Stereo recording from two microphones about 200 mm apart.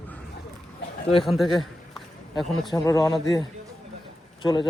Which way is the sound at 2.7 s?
15° left (ahead or behind).